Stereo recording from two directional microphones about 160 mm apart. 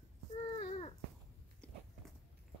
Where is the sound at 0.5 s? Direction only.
40° left (ahead or behind).